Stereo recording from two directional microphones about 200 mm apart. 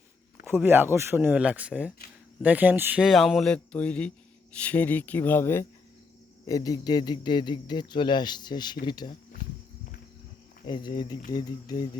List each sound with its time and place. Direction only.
0.4 s speech: 10° right (ahead or behind); by 9.1 s 20° left (ahead or behind)
10.7 s speech: 25° left (ahead or behind)